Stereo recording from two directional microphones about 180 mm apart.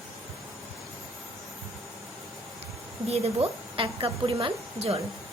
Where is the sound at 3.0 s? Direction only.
35° right (ahead or behind).